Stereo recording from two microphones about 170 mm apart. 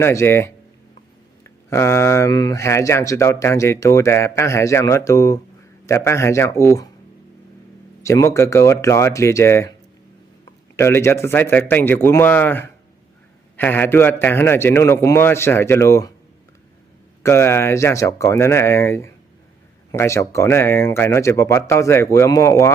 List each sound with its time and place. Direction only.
0.0 s speech: 15° left (ahead or behind)
8.0 s speech: 15° left (ahead or behind)
10.8 s speech: 15° left (ahead or behind)
17.2 s speech: 15° left (ahead or behind)